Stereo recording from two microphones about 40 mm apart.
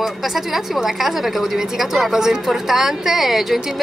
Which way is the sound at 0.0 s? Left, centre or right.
Centre.